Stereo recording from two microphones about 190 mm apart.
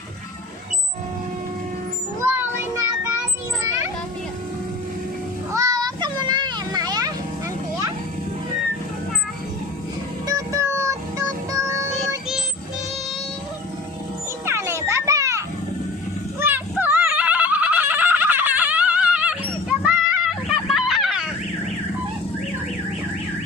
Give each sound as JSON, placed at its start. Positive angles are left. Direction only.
{"t": 2.2, "sound": "child singing", "side_deg": -10}
{"t": 5.5, "sound": "children playing", "side_deg": -20}
{"t": 10.2, "sound": "music", "side_deg": -15}
{"t": 11.5, "sound": "child singing", "side_deg": -15}
{"t": 14.4, "sound": "children playing", "side_deg": -15}
{"t": 16.4, "sound": "a sound", "side_deg": -10}